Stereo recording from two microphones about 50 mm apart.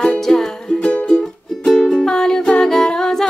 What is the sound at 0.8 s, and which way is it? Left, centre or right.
Music, left.